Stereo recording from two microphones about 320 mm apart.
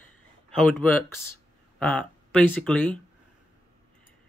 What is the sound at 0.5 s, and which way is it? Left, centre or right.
Speech, centre.